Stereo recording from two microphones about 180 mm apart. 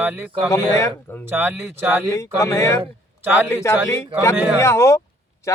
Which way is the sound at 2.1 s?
15° left (ahead or behind).